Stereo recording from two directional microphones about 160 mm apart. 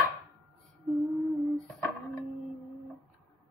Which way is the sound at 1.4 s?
Centre (ahead or behind).